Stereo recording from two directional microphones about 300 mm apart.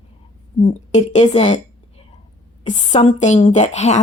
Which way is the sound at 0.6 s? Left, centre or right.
Left.